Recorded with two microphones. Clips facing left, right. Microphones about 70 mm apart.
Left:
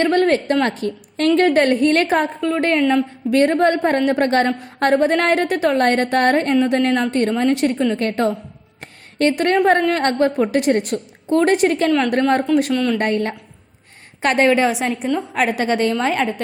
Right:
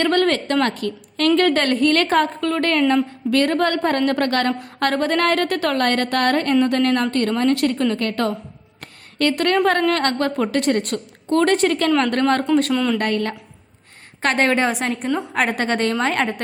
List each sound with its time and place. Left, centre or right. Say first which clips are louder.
0.0 s a woman's voice: left 2 dB; centre
12.7 s a woman's voice: left 1 dB; centre
13.0 s a woman's voice: left 2 dB; left
14.6 s a woman's voice: left 2 dB; centre